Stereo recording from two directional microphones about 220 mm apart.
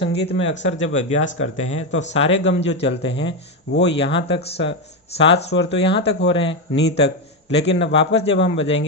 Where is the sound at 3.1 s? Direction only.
55° left (ahead or behind).